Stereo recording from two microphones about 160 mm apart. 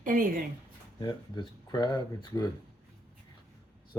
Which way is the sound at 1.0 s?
30° left (ahead or behind).